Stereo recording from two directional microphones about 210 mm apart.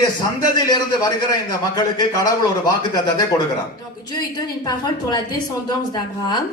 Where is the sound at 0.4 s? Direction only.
20° left (ahead or behind).